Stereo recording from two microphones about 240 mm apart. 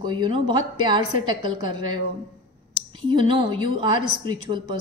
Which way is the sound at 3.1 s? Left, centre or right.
Centre.